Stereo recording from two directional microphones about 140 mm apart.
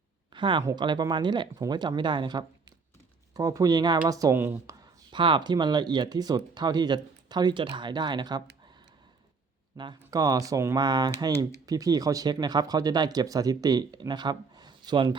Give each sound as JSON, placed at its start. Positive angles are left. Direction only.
{"t": 0.3, "sound": "speech", "side_deg": -35}
{"t": 4.8, "sound": "speech", "side_deg": -35}
{"t": 9.7, "sound": "speech", "side_deg": -30}